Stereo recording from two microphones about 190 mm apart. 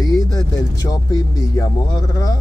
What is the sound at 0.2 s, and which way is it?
Speech, 20° left (ahead or behind).